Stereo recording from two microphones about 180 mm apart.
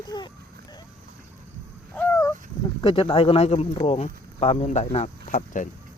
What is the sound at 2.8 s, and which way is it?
Speech, 30° left (ahead or behind).